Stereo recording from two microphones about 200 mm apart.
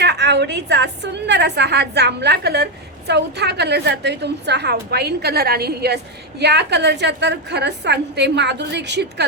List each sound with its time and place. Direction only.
0.0 s a woman's voice: 55° right (ahead or behind)